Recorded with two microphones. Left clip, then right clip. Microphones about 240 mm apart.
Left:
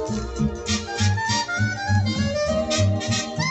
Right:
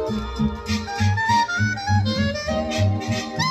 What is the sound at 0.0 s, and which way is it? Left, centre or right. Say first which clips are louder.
Music: right 2 dB; right.